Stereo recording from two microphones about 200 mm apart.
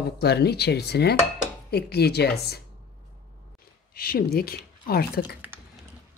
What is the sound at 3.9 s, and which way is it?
Speech, 50° left (ahead or behind).